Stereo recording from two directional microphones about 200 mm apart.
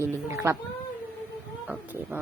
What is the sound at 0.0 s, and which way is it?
Speech, 15° right (ahead or behind).